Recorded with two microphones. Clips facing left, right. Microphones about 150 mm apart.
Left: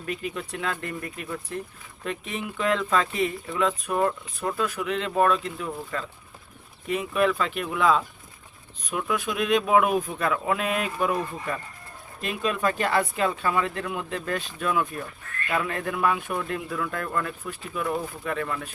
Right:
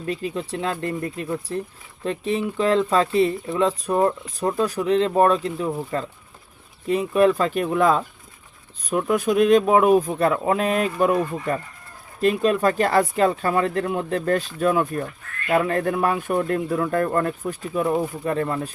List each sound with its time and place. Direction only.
0.0 s speech: 30° right (ahead or behind)
12.2 s speech: 40° right (ahead or behind)